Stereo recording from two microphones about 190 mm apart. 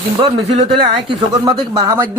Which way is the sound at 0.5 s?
30° right (ahead or behind).